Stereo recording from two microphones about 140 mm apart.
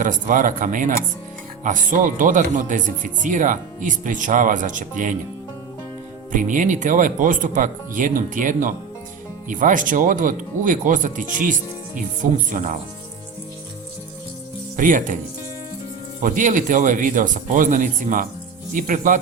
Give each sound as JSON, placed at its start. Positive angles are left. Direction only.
{"t": 0.0, "sound": "speech", "side_deg": -70}
{"t": 6.3, "sound": "speech", "side_deg": -65}
{"t": 14.8, "sound": "speech", "side_deg": -70}
{"t": 16.2, "sound": "speech", "side_deg": -70}